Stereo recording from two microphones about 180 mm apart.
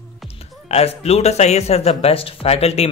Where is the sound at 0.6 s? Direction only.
35° left (ahead or behind).